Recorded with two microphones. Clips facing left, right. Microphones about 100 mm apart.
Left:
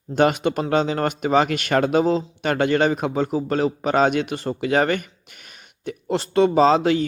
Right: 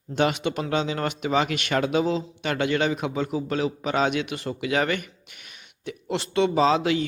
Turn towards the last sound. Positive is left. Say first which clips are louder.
# left 5 dB
turn(degrees=40)  # may be behind; listen again after turning